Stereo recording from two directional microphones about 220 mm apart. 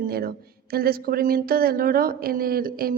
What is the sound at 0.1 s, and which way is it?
A woman's voice, 45° right (ahead or behind).